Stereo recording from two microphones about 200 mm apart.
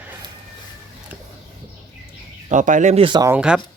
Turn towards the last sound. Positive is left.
turn(degrees=-5)  # may be behind; listen again after turning